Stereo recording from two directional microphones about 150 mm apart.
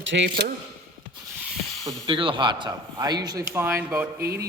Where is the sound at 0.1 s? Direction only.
90° right.